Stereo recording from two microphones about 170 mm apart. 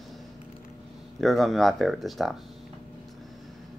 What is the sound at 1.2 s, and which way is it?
Speech, centre (ahead or behind).